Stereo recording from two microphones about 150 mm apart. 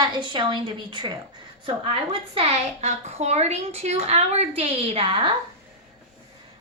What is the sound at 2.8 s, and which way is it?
A woman's voice, 45° right (ahead or behind).